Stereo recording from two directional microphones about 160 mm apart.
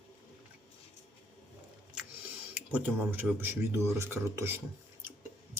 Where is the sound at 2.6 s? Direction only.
10° right (ahead or behind).